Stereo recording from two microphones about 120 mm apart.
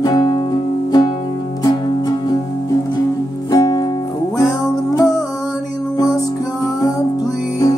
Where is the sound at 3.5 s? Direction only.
35° left (ahead or behind).